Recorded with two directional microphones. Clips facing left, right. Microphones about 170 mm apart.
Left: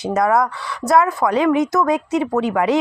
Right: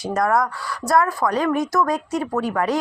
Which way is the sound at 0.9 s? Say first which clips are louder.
Left 3 dB; 20° left (ahead or behind).